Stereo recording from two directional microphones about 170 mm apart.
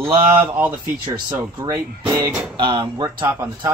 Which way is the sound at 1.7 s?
20° right (ahead or behind).